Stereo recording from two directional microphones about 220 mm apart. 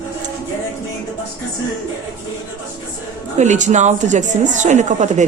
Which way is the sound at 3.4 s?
35° right (ahead or behind).